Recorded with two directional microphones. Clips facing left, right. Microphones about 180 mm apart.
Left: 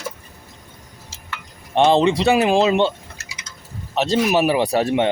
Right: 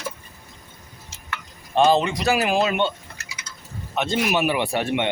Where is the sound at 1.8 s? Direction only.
30° left (ahead or behind).